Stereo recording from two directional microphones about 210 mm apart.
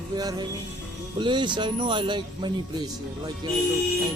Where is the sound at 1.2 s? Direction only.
20° right (ahead or behind).